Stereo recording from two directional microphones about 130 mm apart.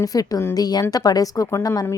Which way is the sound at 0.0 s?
30° left (ahead or behind).